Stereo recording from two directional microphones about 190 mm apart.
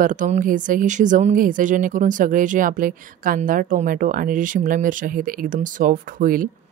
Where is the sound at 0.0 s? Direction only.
45° right (ahead or behind).